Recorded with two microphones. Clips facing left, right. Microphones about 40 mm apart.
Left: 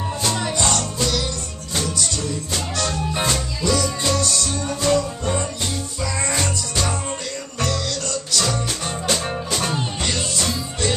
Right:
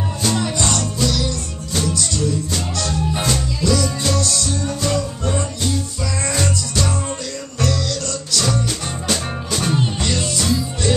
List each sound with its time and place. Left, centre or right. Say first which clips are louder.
0.2 s music: right 2 dB; centre
8.3 s music: right 3 dB; centre